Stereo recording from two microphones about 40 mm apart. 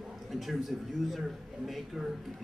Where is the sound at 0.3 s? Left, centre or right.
Centre.